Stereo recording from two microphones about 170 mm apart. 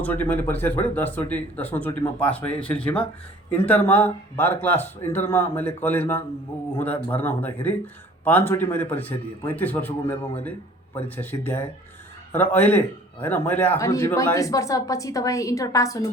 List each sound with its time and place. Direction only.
0.0 s speech: 10° left (ahead or behind)
11.2 s speech: 10° left (ahead or behind)